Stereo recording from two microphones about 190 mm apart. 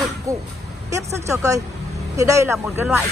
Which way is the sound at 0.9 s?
15° right (ahead or behind).